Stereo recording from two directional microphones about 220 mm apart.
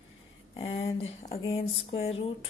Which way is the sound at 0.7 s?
55° left (ahead or behind).